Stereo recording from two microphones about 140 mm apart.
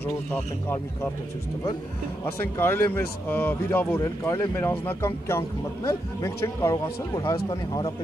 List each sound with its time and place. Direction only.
0.0 s speech: 15° left (ahead or behind)
2.5 s speech: 15° left (ahead or behind)